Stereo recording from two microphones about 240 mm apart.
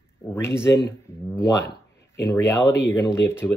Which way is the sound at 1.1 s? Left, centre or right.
Centre.